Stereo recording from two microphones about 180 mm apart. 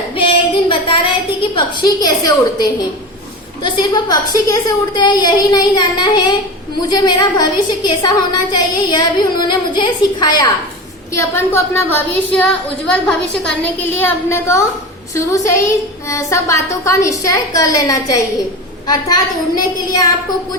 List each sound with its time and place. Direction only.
0.2 s a sound: 30° left (ahead or behind)
1.4 s a woman's voice: 25° left (ahead or behind)
19.5 s a woman's voice: 20° left (ahead or behind)